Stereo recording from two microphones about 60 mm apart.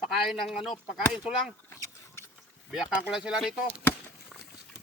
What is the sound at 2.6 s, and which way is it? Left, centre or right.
Speech, centre.